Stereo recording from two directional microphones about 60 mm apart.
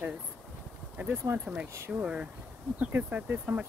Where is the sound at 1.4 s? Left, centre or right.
Right.